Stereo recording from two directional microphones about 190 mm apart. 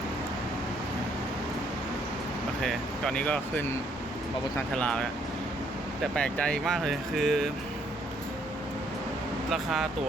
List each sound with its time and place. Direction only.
2.6 s speech: 5° left (ahead or behind)
9.5 s speech: centre (ahead or behind)